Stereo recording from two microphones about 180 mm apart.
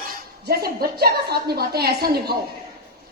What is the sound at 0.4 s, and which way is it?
A woman's voice, 60° right (ahead or behind).